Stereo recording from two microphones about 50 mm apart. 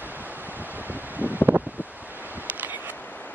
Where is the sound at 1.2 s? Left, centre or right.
Right.